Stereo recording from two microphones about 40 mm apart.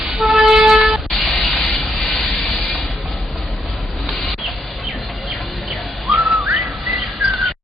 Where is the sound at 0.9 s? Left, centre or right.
Right.